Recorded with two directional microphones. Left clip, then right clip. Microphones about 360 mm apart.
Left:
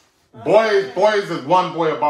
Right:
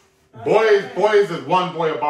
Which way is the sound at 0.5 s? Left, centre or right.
Left.